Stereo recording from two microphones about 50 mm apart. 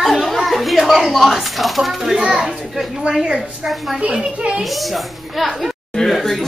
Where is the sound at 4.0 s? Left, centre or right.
Right.